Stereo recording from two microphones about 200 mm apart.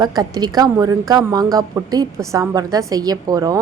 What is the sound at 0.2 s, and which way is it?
A woman's voice, 20° right (ahead or behind).